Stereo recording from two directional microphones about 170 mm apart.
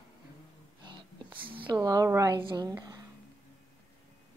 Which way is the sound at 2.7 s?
20° right (ahead or behind).